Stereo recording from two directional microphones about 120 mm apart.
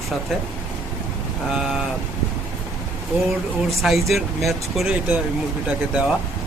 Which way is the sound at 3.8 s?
Centre (ahead or behind).